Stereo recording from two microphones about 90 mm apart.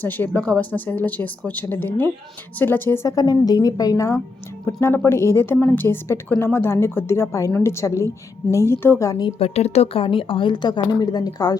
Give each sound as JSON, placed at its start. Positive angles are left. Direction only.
{"t": 0.0, "sound": "a woman's voice", "side_deg": 20}
{"t": 3.1, "sound": "a woman's voice", "side_deg": 45}
{"t": 9.0, "sound": "a woman's voice", "side_deg": 45}
{"t": 9.4, "sound": "a woman's voice", "side_deg": 90}